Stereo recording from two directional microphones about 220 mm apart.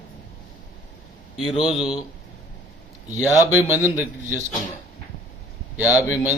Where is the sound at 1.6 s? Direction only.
Centre (ahead or behind).